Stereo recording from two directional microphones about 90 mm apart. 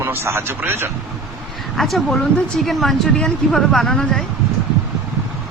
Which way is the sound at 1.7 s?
Centre (ahead or behind).